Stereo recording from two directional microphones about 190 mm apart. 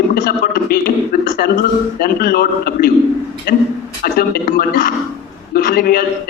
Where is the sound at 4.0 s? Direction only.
50° left (ahead or behind).